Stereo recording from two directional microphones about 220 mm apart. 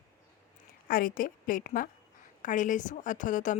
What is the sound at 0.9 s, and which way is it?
Speech, 40° left (ahead or behind).